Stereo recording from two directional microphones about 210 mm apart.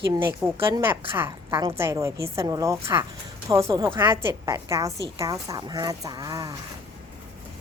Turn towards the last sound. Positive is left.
turn(degrees=-20)  # may be behind; listen again after turning